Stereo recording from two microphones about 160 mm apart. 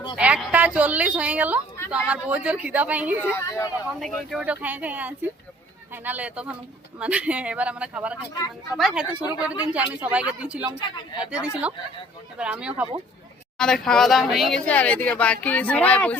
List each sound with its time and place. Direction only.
0.2 s a woman's voice: 10° right (ahead or behind)
3.3 s speech: 20° left (ahead or behind)
4.0 s speech: centre (ahead or behind)
10.8 s speech: 30° left (ahead or behind)
11.3 s speech: 5° right (ahead or behind)
13.6 s speech: 5° left (ahead or behind)